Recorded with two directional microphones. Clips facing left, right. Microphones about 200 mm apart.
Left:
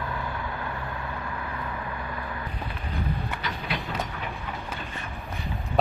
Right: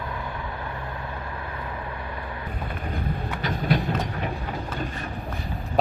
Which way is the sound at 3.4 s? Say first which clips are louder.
Right 12 dB; 40° right (ahead or behind).